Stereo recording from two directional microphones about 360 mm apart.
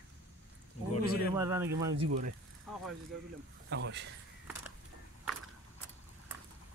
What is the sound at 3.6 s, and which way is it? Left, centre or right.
Speech, right.